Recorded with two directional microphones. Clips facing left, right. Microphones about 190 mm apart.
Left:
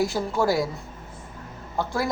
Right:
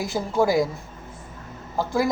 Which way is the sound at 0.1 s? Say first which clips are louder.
Even; 15° right (ahead or behind).